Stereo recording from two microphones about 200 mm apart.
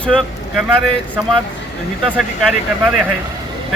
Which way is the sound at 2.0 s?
5° right (ahead or behind).